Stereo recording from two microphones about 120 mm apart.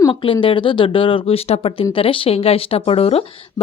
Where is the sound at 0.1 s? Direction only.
45° left (ahead or behind).